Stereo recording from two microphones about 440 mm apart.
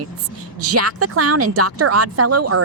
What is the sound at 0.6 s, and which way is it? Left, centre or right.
Speech, right.